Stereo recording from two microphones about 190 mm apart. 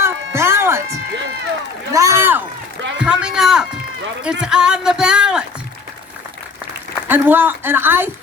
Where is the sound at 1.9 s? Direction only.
15° right (ahead or behind).